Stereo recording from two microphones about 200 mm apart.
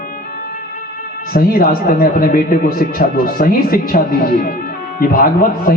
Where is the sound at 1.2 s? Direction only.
45° left (ahead or behind).